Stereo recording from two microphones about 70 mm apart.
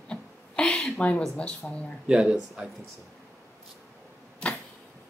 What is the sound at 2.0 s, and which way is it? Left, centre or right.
Speech, centre.